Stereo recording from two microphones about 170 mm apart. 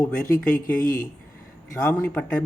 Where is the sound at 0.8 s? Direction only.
55° left (ahead or behind).